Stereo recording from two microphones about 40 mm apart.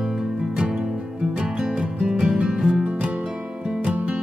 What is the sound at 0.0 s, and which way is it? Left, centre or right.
Music, centre.